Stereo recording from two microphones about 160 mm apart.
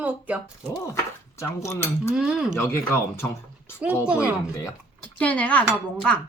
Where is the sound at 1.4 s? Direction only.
15° left (ahead or behind).